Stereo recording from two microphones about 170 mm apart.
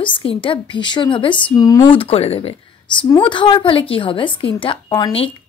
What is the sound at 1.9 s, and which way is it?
A woman's voice, 35° left (ahead or behind).